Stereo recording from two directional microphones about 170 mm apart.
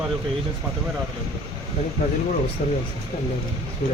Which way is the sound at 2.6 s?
50° left (ahead or behind).